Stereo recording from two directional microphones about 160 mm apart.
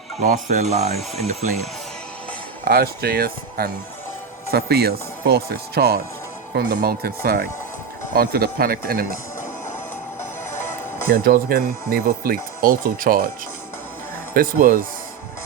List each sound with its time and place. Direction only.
0.2 s speech: 50° right (ahead or behind)
2.6 s speech: 75° right (ahead or behind)
6.5 s speech: 90° right; by 9.1 s 70° right (ahead or behind)
11.1 s speech: 65° right (ahead or behind)
14.3 s speech: 65° right (ahead or behind)